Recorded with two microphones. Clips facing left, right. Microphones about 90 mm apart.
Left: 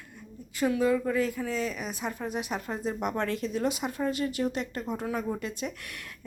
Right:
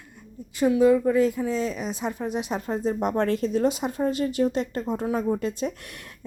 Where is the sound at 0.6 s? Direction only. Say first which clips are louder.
Right 7 dB; 20° right (ahead or behind).